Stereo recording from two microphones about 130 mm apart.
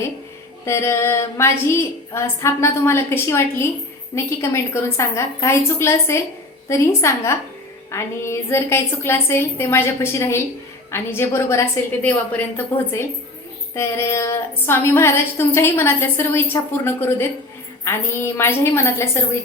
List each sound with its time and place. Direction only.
0.6 s a woman's voice: 20° left (ahead or behind)